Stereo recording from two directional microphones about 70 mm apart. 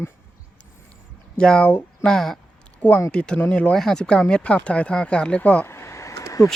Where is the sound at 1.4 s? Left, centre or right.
Centre.